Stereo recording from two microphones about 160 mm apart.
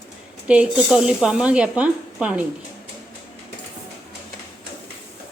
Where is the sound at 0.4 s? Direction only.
10° right (ahead or behind).